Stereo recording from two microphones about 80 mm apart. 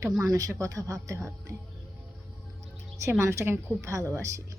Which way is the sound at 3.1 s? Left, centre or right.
Right.